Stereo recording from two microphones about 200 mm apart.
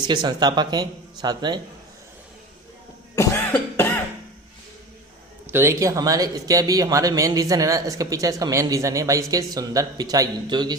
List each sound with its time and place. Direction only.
0.1 s speech: 20° right (ahead or behind)
3.2 s cough: 10° left (ahead or behind)
5.5 s speech: 15° right (ahead or behind)